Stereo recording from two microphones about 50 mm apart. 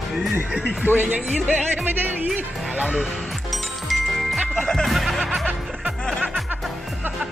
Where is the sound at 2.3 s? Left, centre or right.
Right.